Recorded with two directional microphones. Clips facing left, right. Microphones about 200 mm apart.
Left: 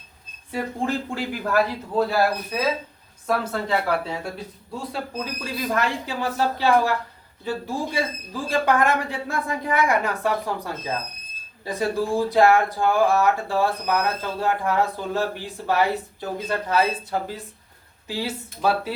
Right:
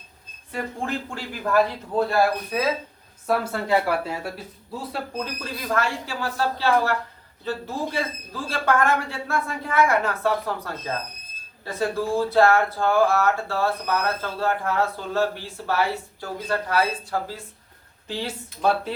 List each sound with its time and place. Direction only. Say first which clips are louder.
1.1 s speech: right 4 dB; 5° left (ahead or behind)
5.7 s speech: right 1 dB; 20° left (ahead or behind)
18.1 s speech: left 2 dB; 5° left (ahead or behind)